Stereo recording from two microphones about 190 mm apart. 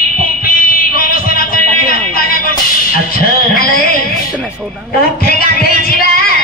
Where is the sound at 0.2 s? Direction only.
50° left (ahead or behind).